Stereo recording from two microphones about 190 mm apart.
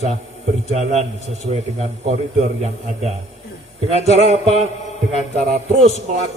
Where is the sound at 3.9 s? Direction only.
35° left (ahead or behind).